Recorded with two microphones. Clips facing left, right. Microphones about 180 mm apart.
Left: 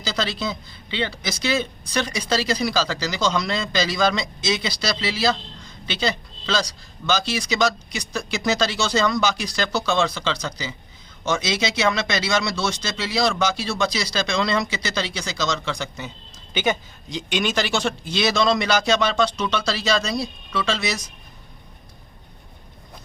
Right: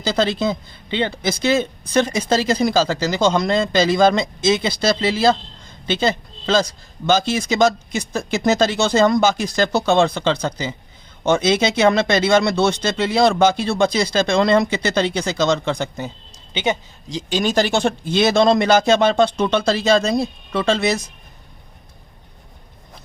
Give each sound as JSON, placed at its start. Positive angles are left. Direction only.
{"t": 0.0, "sound": "a man's voice", "side_deg": -50}
{"t": 16.6, "sound": "speech", "side_deg": -25}
{"t": 17.2, "sound": "speech", "side_deg": -40}